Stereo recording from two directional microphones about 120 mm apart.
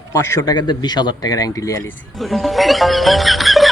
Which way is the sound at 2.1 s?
Centre (ahead or behind).